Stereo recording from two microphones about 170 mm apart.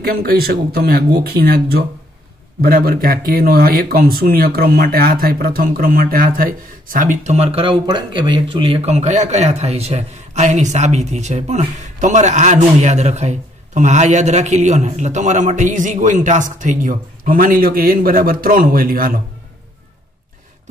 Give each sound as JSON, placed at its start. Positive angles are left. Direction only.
{"t": 0.0, "sound": "speech", "side_deg": -65}